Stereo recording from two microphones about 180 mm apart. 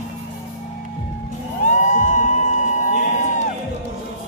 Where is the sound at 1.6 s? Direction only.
45° left (ahead or behind).